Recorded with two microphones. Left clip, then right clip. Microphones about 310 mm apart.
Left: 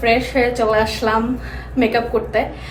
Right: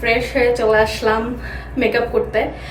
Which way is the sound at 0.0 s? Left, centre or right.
Centre.